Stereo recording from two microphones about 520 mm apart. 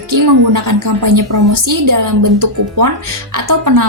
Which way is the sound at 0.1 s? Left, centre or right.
Right.